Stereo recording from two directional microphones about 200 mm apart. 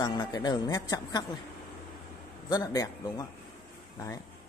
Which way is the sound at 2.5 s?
20° left (ahead or behind).